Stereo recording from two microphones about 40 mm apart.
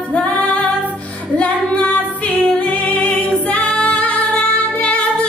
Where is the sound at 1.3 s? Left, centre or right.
Left.